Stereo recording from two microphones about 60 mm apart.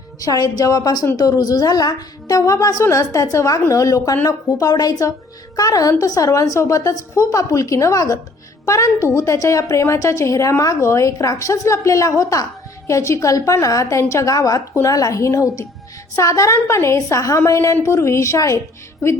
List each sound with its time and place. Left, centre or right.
0.3 s a woman's voice: left
4.3 s a woman's voice: left
14.3 s a woman's voice: left
14.8 s a woman's voice: left